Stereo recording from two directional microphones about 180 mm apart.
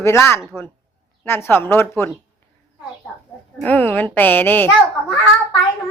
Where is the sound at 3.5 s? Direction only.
10° left (ahead or behind).